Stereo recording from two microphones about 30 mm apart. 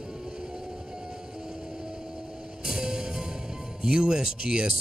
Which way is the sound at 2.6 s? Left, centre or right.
Right.